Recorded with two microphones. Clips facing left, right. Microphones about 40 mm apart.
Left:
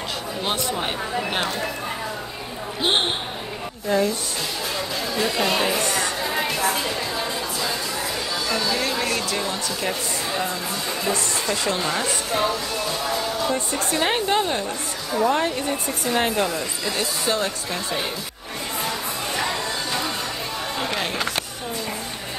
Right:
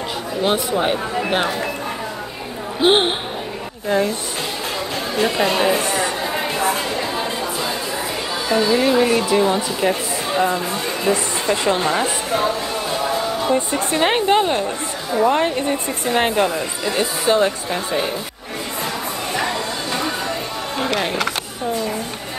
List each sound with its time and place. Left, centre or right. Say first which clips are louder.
0.4 s speech: right 7 dB; centre
2.8 s speech: right 7 dB; centre
3.9 s speech: right 2 dB; right
5.2 s speech: right 5 dB; right
5.9 s a sound: right 3 dB; right
8.5 s speech: right 9 dB; right
13.5 s speech: right 5 dB; right